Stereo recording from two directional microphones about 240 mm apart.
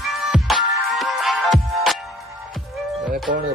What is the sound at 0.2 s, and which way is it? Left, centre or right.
Music, centre.